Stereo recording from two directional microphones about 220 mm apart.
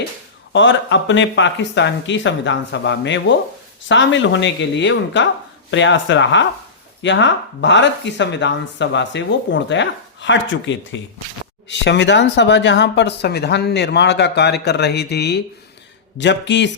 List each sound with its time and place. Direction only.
0.5 s speech: 55° left (ahead or behind)